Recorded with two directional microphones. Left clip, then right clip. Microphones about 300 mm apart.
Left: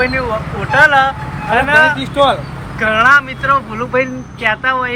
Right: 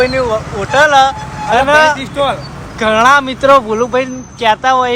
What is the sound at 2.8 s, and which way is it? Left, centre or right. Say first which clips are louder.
Speech: right 1 dB; centre.